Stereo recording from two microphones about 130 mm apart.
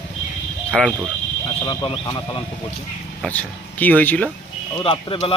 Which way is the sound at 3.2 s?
10° left (ahead or behind).